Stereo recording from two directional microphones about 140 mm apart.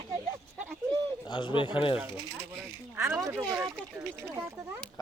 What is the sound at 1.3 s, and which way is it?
Speech, 35° left (ahead or behind).